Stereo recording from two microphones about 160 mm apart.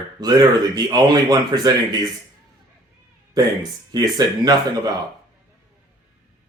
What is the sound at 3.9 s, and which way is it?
Speech, 25° right (ahead or behind).